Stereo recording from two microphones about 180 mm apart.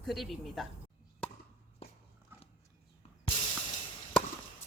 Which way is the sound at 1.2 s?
5° left (ahead or behind).